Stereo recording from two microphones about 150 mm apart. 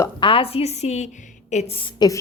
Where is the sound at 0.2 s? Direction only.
35° left (ahead or behind).